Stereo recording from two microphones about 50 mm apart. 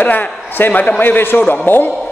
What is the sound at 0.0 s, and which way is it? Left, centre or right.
A man's voice, left.